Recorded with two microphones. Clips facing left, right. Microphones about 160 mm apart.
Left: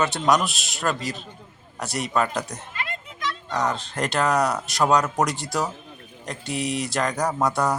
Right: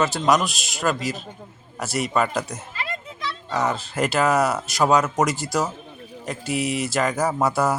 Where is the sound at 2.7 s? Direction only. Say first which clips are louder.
Right 2 dB; 35° right (ahead or behind).